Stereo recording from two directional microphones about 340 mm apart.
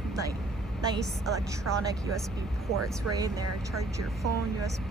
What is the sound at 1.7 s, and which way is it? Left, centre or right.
Speech, right.